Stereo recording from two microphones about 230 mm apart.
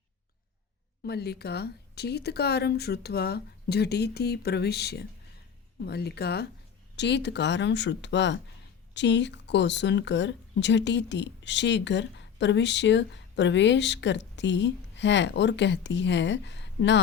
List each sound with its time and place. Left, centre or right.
1.0 s speech: left